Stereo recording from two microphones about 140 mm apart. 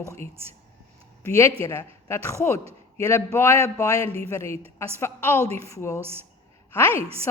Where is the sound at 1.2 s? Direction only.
20° left (ahead or behind).